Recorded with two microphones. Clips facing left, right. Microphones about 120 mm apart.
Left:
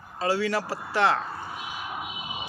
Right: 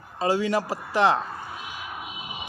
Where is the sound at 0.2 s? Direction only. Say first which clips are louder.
Right 2 dB; 20° right (ahead or behind).